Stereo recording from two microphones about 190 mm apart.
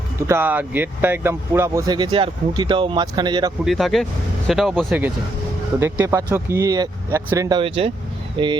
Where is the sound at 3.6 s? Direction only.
Centre (ahead or behind); by 8.5 s 25° right (ahead or behind).